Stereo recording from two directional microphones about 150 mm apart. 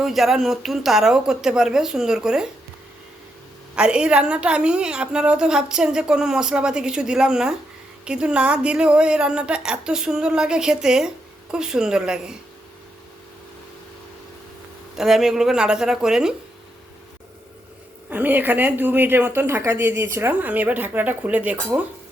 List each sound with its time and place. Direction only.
0.0 s a woman's voice: centre (ahead or behind)
3.8 s a woman's voice: 5° right (ahead or behind)
14.9 s a woman's voice: 5° right (ahead or behind)
18.1 s speech: 10° right (ahead or behind)